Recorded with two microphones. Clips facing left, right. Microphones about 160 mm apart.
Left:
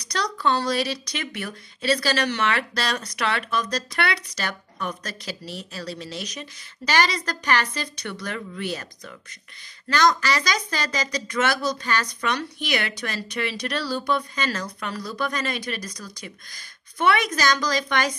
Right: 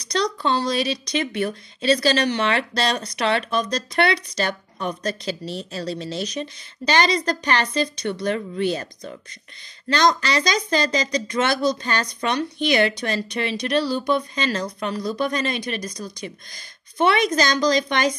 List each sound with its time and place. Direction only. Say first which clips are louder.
0.0 s speech: right 2 dB; 25° right (ahead or behind)